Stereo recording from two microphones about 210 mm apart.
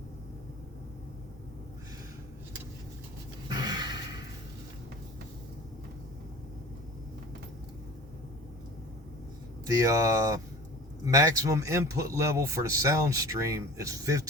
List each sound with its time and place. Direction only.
3.5 s gasp: 20° right (ahead or behind)
9.6 s speech: 15° right (ahead or behind)